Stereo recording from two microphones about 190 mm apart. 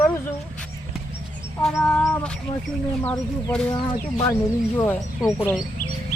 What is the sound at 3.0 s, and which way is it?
Speech, 10° left (ahead or behind).